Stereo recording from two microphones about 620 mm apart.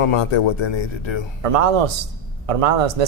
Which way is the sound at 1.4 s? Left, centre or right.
Right.